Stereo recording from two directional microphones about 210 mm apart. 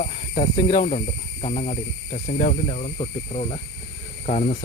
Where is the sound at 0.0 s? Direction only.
40° left (ahead or behind).